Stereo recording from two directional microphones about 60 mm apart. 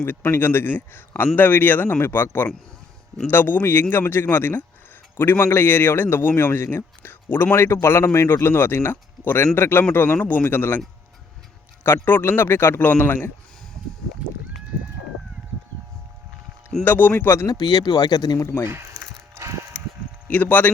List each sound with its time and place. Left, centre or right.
0.0 s a man's voice: left
11.8 s a man's voice: left
16.8 s a man's voice: left
17.4 s speech: left
19.0 s mechanisms: centre
20.3 s speech: left